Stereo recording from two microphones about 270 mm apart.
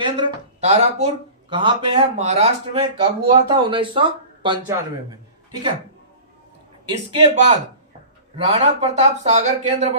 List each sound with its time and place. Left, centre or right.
0.0 s speech: centre
6.8 s speech: centre